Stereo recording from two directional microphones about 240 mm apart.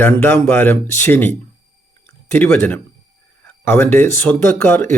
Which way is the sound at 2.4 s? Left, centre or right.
Centre.